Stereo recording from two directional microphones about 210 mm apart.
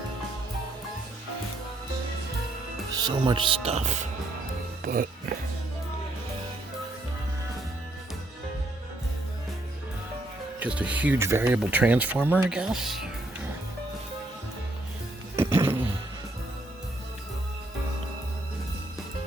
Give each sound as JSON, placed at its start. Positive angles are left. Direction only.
{"t": 3.0, "sound": "speech", "side_deg": -20}
{"t": 10.6, "sound": "speech", "side_deg": -5}
{"t": 15.4, "sound": "music", "side_deg": -10}